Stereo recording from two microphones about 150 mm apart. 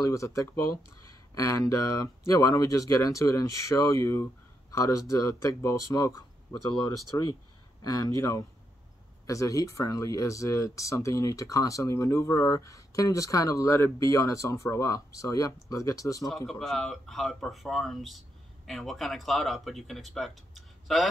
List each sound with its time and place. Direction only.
0.0 s speech: 20° left (ahead or behind)
16.4 s speech: centre (ahead or behind)